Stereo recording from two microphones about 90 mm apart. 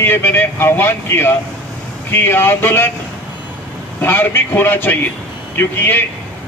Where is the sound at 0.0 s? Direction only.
25° left (ahead or behind).